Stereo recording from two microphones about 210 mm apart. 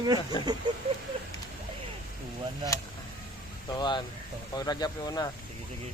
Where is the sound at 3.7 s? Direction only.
20° left (ahead or behind).